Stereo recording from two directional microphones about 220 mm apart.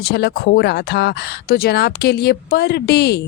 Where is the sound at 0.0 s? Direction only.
45° left (ahead or behind).